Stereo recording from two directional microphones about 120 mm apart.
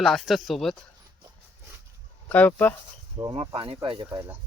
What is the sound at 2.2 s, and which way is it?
Speech, 15° left (ahead or behind).